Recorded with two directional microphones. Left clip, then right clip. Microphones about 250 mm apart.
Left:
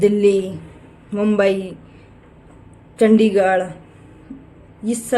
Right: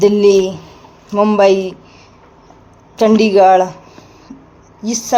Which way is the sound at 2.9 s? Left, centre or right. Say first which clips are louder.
Right 5 dB; centre.